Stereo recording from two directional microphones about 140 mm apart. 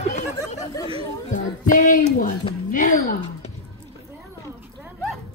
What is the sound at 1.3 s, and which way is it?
Speech, 70° left (ahead or behind).